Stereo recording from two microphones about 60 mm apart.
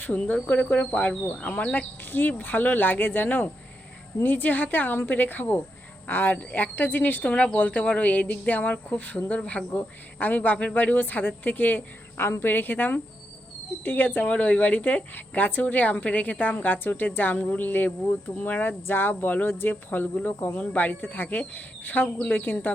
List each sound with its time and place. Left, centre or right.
0.0 s speech: left